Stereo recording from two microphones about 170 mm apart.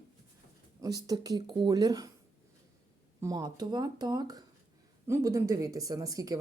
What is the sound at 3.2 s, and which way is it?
Speech, 25° right (ahead or behind).